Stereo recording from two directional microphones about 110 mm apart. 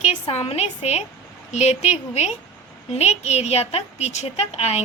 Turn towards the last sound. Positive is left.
turn(degrees=75)  # may be behind; listen again after turning